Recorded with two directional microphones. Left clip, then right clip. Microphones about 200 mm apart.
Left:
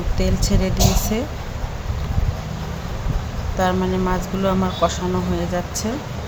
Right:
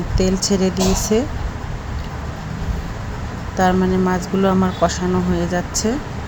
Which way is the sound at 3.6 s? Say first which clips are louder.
Right 3 dB; 15° right (ahead or behind).